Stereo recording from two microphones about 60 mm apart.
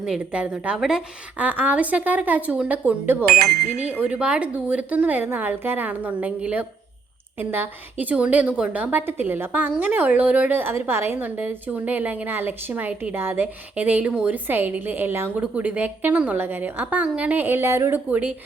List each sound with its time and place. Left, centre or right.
0.3 s a woman's voice: right
0.8 s a woman's voice: centre
1.4 s a woman's voice: right
4.1 s a woman's voice: right
8.1 s a woman's voice: right
10.6 s a woman's voice: right
13.1 s a woman's voice: right; by 14.3 s centre
14.4 s a woman's voice: right
15.4 s a woman's voice: right
17.4 s a woman's voice: right
17.7 s a woman's voice: right
18.1 s a woman's voice: right